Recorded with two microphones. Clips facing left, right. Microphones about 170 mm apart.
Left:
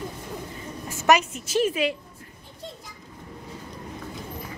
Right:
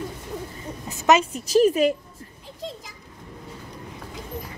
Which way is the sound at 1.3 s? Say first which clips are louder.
Right 6 dB; 35° right (ahead or behind).